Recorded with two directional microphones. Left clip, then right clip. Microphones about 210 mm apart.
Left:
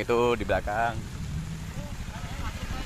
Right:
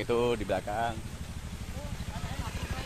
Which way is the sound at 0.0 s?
40° left (ahead or behind).